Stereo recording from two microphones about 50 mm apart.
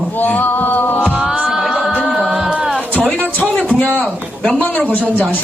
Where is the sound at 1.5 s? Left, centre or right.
Centre.